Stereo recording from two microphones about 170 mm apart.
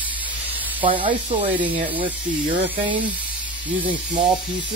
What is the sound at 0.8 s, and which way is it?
Speech, 30° right (ahead or behind).